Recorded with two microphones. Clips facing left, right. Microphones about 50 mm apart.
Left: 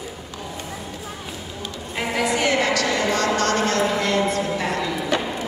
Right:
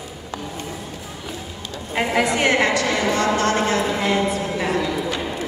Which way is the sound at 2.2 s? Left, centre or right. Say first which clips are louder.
Right 2 dB; right.